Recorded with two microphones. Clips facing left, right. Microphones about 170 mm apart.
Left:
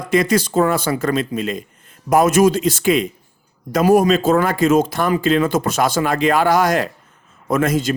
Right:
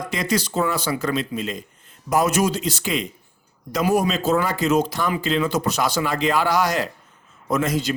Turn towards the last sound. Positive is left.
turn(degrees=50)  # may be behind; listen again after turning